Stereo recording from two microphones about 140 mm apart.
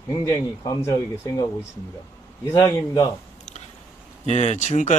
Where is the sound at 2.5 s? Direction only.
30° left (ahead or behind).